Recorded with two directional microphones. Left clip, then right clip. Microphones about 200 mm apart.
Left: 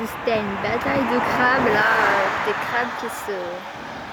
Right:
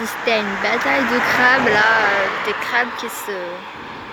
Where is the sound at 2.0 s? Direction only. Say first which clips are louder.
Right 1 dB; 50° left (ahead or behind).